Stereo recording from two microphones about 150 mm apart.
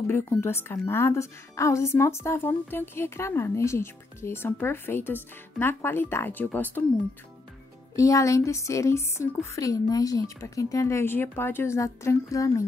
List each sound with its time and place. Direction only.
0.0 s a woman's voice: 15° left (ahead or behind)
7.9 s a woman's voice: 20° left (ahead or behind)